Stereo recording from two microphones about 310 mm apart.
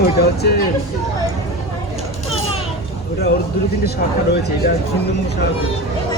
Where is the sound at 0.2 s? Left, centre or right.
Left.